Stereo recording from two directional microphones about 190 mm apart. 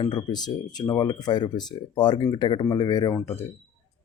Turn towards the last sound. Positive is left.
turn(degrees=10)  # may be behind; listen again after turning